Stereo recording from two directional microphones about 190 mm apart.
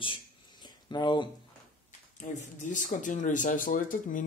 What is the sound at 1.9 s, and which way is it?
Speech, 40° left (ahead or behind).